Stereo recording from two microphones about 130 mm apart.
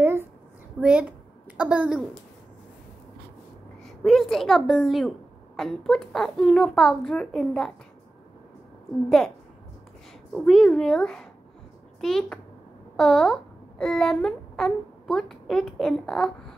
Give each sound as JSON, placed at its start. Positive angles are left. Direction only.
{"t": 0.0, "sound": "a sound", "side_deg": -15}
{"t": 0.7, "sound": "a woman's voice", "side_deg": -10}
{"t": 3.8, "sound": "a child's voice", "side_deg": 0}
{"t": 10.3, "sound": "a child's voice", "side_deg": 5}